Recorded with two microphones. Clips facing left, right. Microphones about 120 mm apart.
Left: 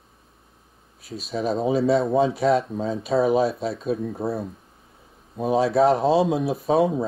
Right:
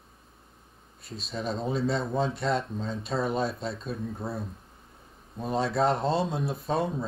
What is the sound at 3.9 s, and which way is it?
Speech, 60° left (ahead or behind).